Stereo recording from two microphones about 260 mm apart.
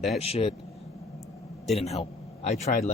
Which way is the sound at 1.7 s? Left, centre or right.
Left.